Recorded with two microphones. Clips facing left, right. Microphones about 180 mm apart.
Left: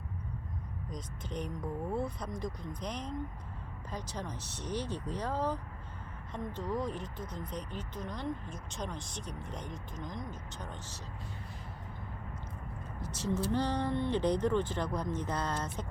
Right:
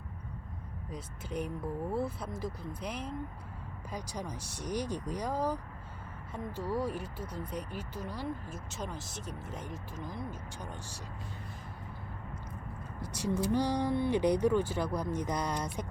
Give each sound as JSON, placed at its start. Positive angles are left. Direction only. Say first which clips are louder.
{"t": 0.9, "sound": "speech", "louder": "right 2 dB", "side_deg": -10}
{"t": 13.0, "sound": "speech", "louder": "right 1 dB", "side_deg": -10}